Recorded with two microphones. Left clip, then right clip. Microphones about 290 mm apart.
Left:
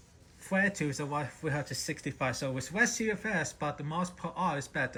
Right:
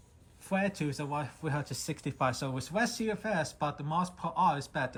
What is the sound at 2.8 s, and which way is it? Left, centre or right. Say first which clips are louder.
Speech: left 3 dB; centre.